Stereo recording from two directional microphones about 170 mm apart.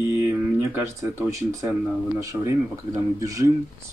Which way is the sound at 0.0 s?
15° right (ahead or behind).